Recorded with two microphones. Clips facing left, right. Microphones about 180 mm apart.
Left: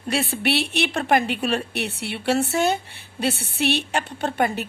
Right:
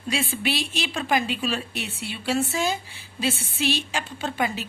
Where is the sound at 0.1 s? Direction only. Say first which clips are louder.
Left 4 dB; 65° left (ahead or behind).